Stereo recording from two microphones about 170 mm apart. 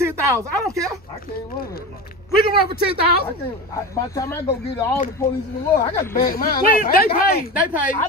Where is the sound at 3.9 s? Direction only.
20° left (ahead or behind).